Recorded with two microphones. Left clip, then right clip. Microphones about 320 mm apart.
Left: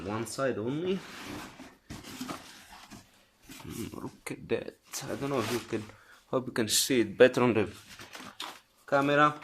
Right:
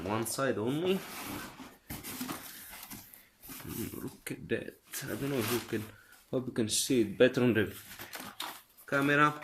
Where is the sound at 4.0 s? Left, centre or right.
Centre.